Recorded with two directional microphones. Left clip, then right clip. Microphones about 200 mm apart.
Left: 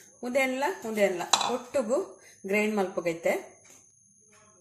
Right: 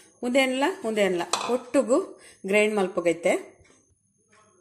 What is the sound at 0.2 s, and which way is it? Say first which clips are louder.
Speech: right 4 dB; 50° right (ahead or behind).